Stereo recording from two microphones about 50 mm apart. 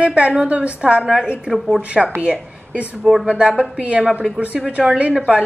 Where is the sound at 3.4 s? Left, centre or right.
Centre.